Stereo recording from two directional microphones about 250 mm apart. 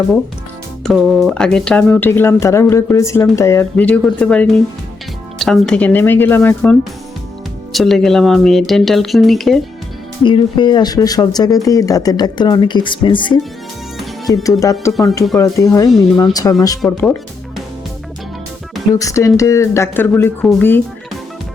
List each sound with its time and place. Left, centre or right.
0.9 s speech: centre
10.2 s speech: centre
18.9 s speech: centre